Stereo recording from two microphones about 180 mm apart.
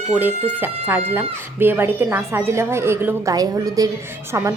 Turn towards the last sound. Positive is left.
turn(degrees=-15)  # may be behind; listen again after turning